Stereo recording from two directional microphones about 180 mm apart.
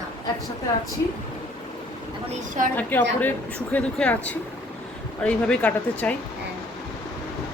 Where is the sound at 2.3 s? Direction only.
45° right (ahead or behind).